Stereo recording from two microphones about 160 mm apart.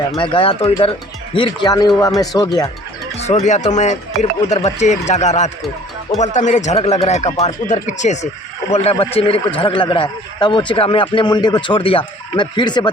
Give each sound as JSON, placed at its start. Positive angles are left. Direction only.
{"t": 0.2, "sound": "a man's voice", "side_deg": 35}
{"t": 3.2, "sound": "a man's voice", "side_deg": 45}